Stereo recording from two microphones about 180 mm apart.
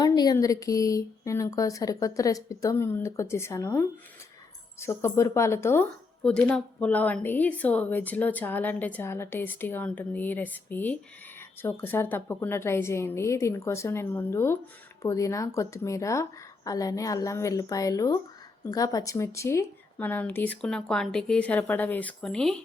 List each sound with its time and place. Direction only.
0.0 s a woman's voice: 20° left (ahead or behind); by 22.6 s 5° left (ahead or behind)